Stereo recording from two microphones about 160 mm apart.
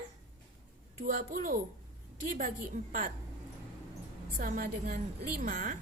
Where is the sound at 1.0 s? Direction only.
55° right (ahead or behind).